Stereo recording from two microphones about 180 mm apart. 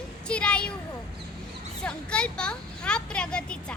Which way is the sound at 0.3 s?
5° left (ahead or behind).